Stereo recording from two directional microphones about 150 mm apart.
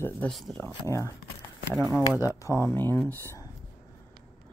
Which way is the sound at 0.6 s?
15° left (ahead or behind).